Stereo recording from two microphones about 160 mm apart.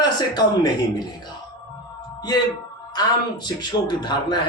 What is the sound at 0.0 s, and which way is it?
Speech, 25° left (ahead or behind).